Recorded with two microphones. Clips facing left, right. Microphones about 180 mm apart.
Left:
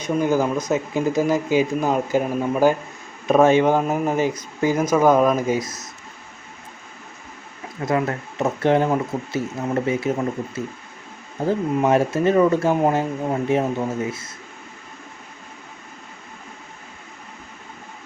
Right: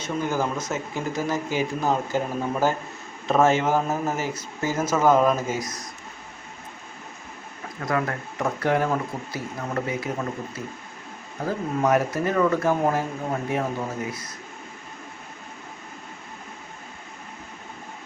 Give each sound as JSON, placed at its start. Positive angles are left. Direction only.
{"t": 0.0, "sound": "speech", "side_deg": 15}
{"t": 7.9, "sound": "speech", "side_deg": 25}